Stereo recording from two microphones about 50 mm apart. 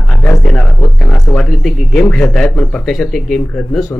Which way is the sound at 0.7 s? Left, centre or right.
Left.